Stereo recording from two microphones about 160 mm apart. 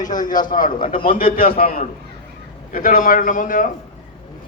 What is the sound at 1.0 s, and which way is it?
A man's voice, 60° left (ahead or behind).